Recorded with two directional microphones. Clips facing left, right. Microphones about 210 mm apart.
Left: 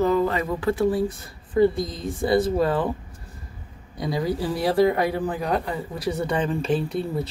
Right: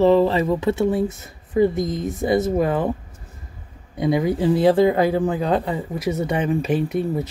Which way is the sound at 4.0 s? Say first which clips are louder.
Right 6 dB; 20° right (ahead or behind).